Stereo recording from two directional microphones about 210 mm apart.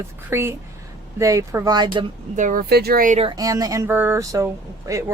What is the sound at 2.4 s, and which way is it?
Speech, 40° right (ahead or behind).